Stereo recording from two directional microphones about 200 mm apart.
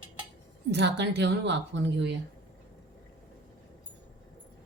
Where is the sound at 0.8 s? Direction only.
60° right (ahead or behind).